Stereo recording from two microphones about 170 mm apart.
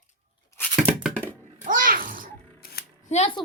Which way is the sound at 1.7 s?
50° right (ahead or behind).